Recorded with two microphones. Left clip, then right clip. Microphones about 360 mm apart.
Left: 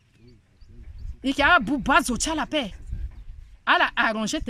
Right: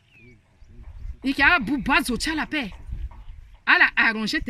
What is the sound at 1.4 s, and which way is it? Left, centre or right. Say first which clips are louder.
Speech: even; centre.